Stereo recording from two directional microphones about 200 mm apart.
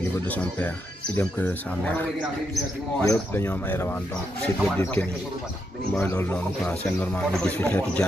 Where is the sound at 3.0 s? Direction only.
15° left (ahead or behind).